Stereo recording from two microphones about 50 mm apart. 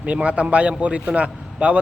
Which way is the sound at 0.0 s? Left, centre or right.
Right.